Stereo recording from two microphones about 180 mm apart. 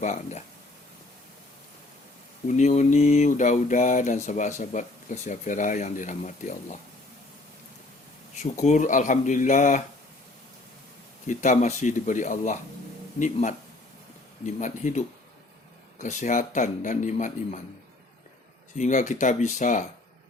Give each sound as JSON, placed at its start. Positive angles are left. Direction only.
{"t": 0.0, "sound": "speech", "side_deg": 40}
{"t": 2.5, "sound": "speech", "side_deg": 40}
{"t": 8.4, "sound": "speech", "side_deg": 40}
{"t": 11.3, "sound": "speech", "side_deg": 45}
{"t": 18.8, "sound": "speech", "side_deg": 45}